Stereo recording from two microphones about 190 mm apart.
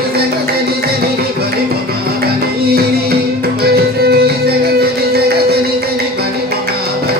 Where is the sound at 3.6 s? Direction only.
55° right (ahead or behind).